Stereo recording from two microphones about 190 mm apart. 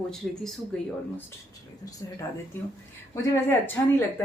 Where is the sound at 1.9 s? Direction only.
20° left (ahead or behind).